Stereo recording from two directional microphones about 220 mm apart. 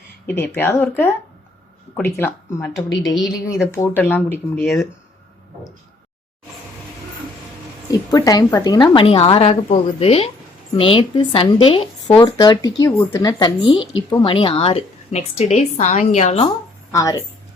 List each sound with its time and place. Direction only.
0.3 s speech: 10° left (ahead or behind)
2.1 s speech: 10° left (ahead or behind)
7.9 s speech: 15° left (ahead or behind)
16.9 s speech: 15° left (ahead or behind)